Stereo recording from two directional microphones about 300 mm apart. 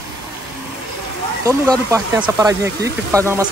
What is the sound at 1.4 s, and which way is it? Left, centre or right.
Speech, centre.